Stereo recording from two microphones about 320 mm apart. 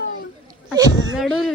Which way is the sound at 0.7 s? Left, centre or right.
Centre.